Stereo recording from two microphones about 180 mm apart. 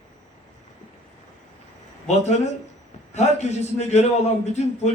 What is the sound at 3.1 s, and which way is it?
A man's voice, 40° left (ahead or behind).